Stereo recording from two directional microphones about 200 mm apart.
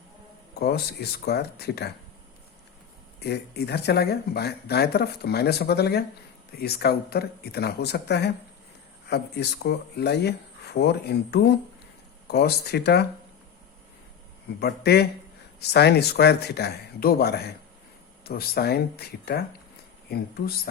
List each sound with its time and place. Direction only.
1.2 s speech: 55° left (ahead or behind)
3.2 s speech: 55° left (ahead or behind)
14.6 s speech: 55° left (ahead or behind)